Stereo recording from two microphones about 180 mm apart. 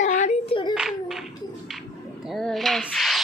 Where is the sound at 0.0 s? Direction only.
40° left (ahead or behind).